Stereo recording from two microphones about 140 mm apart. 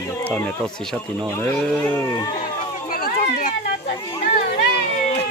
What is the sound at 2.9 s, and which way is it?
Run, 85° left.